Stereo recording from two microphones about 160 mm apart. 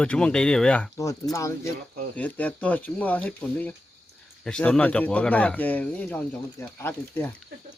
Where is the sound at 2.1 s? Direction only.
10° left (ahead or behind).